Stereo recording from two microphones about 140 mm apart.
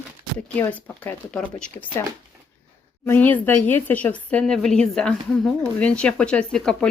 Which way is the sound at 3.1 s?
15° left (ahead or behind).